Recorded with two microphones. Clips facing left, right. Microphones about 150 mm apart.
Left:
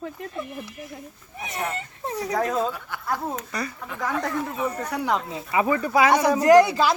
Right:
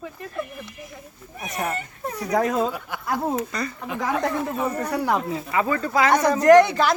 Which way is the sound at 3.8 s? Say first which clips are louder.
Right 5 dB; 15° right (ahead or behind).